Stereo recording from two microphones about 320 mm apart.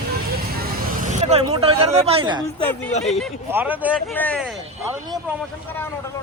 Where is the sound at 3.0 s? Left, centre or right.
Centre.